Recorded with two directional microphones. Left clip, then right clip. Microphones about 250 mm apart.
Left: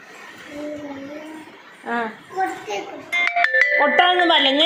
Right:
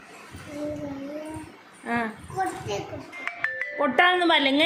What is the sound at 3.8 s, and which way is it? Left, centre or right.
Speech, right.